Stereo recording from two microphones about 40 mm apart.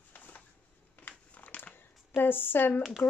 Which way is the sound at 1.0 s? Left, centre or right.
Left.